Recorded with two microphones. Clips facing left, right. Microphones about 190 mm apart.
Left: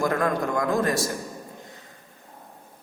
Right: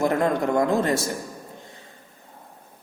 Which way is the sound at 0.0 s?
25° right (ahead or behind).